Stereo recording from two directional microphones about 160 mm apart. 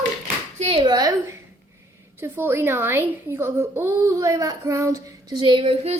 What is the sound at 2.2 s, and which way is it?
Speech, 15° right (ahead or behind).